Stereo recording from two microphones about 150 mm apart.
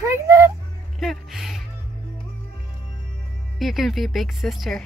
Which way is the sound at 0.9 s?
Centre (ahead or behind).